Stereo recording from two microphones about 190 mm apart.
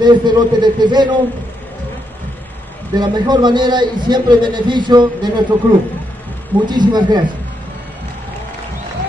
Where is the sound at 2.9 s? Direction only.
20° right (ahead or behind).